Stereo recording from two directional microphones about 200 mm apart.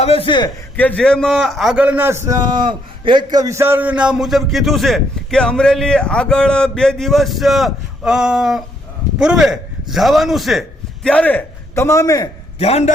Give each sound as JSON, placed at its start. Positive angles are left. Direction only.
{"t": 0.0, "sound": "a man's voice", "side_deg": 30}
{"t": 0.8, "sound": "a man's voice", "side_deg": 5}
{"t": 12.5, "sound": "a man's voice", "side_deg": 30}